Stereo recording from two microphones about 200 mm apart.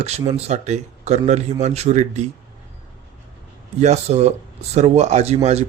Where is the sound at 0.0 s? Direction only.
30° right (ahead or behind).